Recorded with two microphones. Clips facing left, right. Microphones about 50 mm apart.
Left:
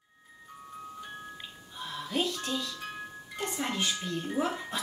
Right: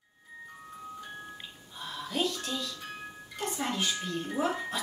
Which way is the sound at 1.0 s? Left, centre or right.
Centre.